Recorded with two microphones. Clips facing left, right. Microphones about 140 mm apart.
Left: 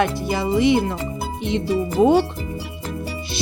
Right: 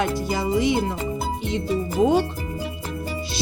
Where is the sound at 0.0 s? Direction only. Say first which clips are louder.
Left 2 dB; 65° left (ahead or behind).